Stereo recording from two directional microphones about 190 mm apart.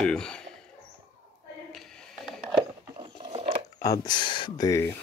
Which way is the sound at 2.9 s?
25° right (ahead or behind).